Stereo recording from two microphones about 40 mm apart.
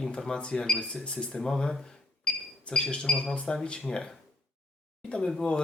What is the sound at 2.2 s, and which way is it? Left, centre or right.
Cash register, left.